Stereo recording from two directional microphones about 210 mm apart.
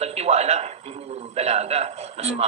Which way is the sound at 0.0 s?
30° right (ahead or behind).